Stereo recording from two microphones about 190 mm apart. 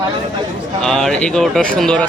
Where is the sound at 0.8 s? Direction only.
Centre (ahead or behind).